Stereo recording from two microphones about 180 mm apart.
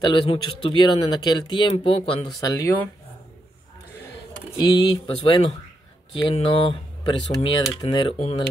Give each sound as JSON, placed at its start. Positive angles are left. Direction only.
{"t": 0.0, "sound": "speech", "side_deg": 25}
{"t": 4.6, "sound": "speech", "side_deg": 20}